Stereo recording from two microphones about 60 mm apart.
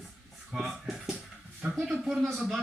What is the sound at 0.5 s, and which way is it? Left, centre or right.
Speech, centre.